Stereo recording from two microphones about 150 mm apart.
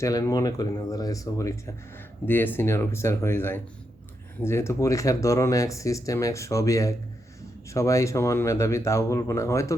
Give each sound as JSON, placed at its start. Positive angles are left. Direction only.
{"t": 0.0, "sound": "speech", "side_deg": 25}